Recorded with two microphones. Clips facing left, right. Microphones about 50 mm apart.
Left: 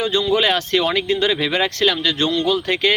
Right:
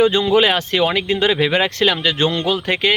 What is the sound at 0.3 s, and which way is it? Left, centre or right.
Speech, centre.